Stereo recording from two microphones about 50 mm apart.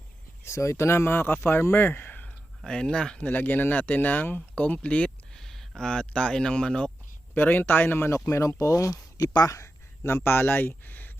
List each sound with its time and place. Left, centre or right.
0.4 s speech: left
2.6 s speech: centre
3.2 s speech: left
5.3 s speech: centre
7.3 s speech: left
8.1 s speech: left
10.2 s speech: left